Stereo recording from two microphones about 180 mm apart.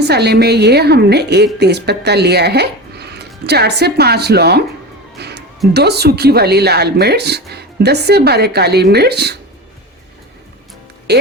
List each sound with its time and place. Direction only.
0.1 s speech: 65° right (ahead or behind)
5.2 s music: 65° right (ahead or behind)
5.7 s speech: 65° right (ahead or behind)
11.1 s speech: 65° right (ahead or behind)